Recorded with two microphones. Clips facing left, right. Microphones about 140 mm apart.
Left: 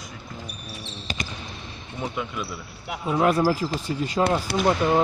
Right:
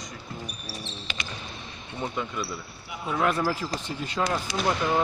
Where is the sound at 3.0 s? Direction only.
30° left (ahead or behind).